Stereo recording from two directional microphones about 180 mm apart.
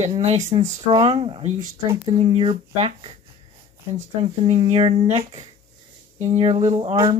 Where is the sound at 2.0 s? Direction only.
35° right (ahead or behind).